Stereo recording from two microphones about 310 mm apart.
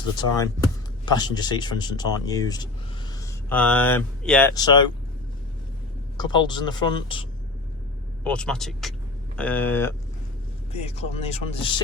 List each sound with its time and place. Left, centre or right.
0.2 s speech: centre
6.1 s speech: centre
8.2 s speech: centre
10.7 s speech: centre